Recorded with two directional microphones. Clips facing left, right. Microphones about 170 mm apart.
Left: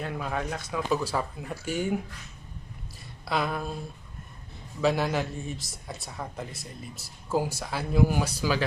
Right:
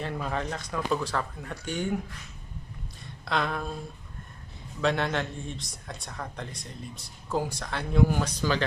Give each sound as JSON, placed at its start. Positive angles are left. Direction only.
{"t": 0.0, "sound": "speech", "side_deg": 0}
{"t": 3.2, "sound": "speech", "side_deg": 5}
{"t": 4.8, "sound": "speech", "side_deg": 5}